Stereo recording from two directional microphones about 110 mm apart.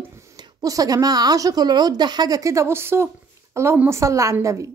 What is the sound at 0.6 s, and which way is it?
A woman's voice, 35° right (ahead or behind).